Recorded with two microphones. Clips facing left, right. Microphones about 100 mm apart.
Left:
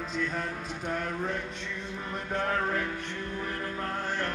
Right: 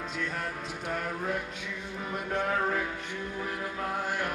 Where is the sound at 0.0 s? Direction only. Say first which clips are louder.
Left 2 dB; centre (ahead or behind).